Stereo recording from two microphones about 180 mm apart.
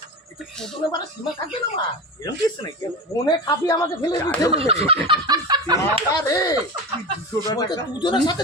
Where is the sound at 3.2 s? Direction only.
20° left (ahead or behind).